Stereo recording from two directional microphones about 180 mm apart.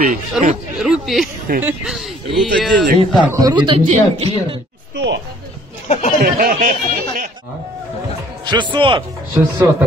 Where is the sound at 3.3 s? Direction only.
20° right (ahead or behind).